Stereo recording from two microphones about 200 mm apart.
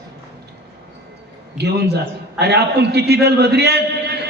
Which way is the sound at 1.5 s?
55° right (ahead or behind).